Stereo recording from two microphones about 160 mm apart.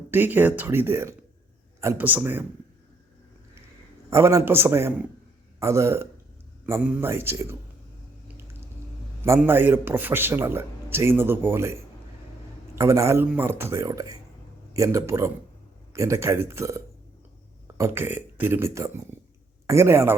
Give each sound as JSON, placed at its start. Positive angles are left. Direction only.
{"t": 0.1, "sound": "a man's voice", "side_deg": -10}
{"t": 4.1, "sound": "a man's voice", "side_deg": -20}
{"t": 9.4, "sound": "a man's voice", "side_deg": -15}